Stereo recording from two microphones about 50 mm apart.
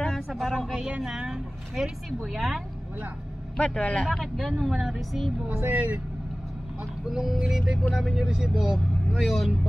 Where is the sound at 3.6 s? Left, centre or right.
Centre.